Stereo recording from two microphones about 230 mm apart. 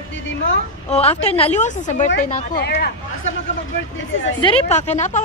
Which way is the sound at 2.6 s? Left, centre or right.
Left.